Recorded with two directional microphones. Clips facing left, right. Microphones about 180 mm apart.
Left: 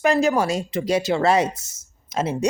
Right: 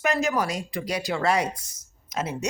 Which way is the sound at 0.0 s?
30° left (ahead or behind).